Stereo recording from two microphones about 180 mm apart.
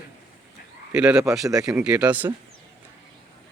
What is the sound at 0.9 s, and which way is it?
Speech, 5° right (ahead or behind).